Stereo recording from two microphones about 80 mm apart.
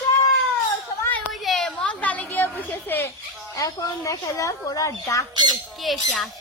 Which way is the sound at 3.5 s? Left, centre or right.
Left.